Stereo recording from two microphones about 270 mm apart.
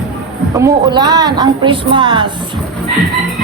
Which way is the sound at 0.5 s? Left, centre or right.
Centre.